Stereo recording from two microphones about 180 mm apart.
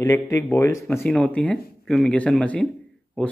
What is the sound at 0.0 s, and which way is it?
Speech, 15° left (ahead or behind).